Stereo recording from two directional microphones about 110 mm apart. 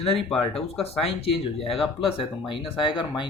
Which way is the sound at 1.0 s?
60° left (ahead or behind).